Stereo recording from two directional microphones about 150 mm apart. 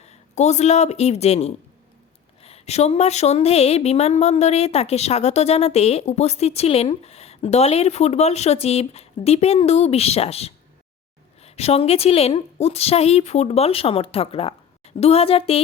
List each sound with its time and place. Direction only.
0.0 s a woman's voice: 50° left (ahead or behind)